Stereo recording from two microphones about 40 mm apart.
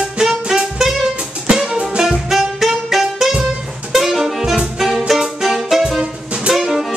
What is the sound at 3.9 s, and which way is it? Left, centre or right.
Saxophone, centre.